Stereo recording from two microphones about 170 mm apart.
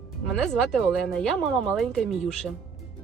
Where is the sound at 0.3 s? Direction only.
Centre (ahead or behind).